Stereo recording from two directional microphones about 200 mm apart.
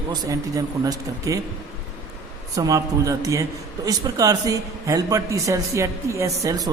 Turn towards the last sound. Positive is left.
turn(degrees=-15)  # may be behind; listen again after turning